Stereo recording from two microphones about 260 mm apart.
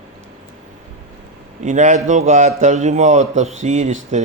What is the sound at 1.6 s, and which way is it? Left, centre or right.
A man's voice, right.